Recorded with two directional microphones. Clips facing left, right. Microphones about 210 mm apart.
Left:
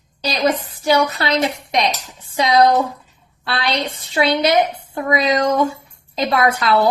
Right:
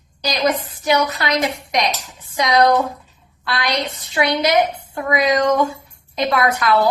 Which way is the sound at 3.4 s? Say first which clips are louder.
Left 1 dB; 30° left (ahead or behind).